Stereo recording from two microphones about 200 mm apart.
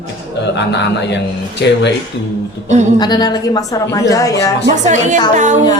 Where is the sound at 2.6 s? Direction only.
35° right (ahead or behind).